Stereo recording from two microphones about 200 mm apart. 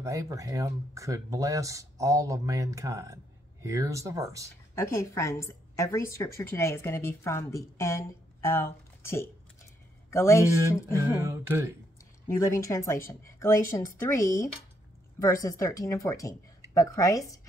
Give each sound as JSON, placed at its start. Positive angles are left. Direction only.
{"t": 0.0, "sound": "speech", "side_deg": -15}
{"t": 4.7, "sound": "a woman's voice", "side_deg": 15}
{"t": 11.1, "sound": "speech", "side_deg": -10}
{"t": 12.3, "sound": "speech", "side_deg": 15}